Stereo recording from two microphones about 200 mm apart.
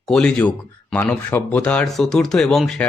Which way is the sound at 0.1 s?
5° left (ahead or behind).